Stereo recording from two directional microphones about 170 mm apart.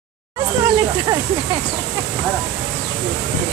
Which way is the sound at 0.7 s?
20° right (ahead or behind).